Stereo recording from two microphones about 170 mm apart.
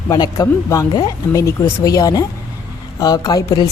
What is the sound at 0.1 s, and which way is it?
A woman's voice, 20° left (ahead or behind).